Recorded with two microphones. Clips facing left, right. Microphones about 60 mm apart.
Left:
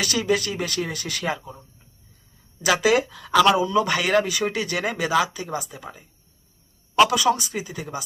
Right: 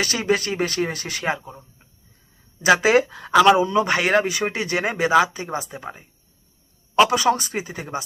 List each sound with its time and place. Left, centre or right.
0.0 s speech: right
3.3 s a man's voice: right
3.6 s speech: right
7.1 s speech: right